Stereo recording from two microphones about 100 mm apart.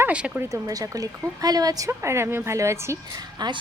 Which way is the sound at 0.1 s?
10° right (ahead or behind).